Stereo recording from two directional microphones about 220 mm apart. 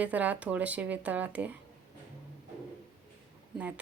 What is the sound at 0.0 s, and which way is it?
Speech, 5° right (ahead or behind).